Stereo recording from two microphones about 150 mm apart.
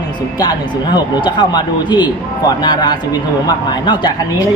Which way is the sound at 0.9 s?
30° left (ahead or behind).